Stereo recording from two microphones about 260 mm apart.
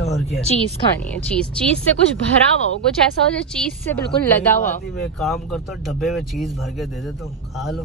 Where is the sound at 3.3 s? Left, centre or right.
Centre.